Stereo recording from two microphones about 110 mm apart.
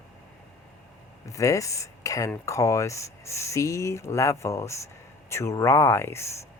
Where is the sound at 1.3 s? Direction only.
30° left (ahead or behind).